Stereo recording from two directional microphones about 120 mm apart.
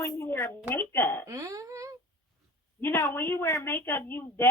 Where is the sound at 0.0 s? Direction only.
20° left (ahead or behind).